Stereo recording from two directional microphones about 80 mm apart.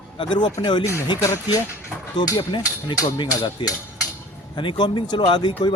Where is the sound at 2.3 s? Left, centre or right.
Left.